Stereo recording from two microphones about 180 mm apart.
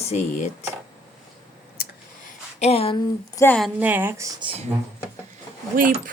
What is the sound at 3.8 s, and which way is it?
Speech, 10° right (ahead or behind).